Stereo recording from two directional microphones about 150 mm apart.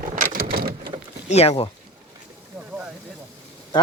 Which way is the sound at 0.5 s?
90° right.